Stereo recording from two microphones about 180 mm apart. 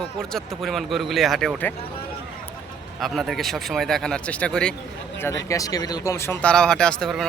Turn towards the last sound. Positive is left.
turn(degrees=5)  # may be behind; listen again after turning